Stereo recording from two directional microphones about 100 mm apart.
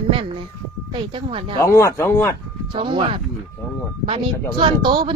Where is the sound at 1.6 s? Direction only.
30° left (ahead or behind).